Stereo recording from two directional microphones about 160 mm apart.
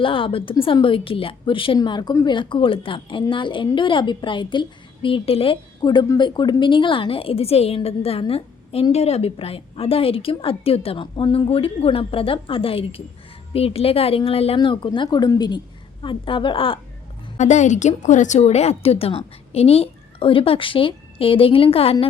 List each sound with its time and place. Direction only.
0.0 s a woman's voice: 35° left (ahead or behind)
17.3 s a woman's voice: 45° left (ahead or behind)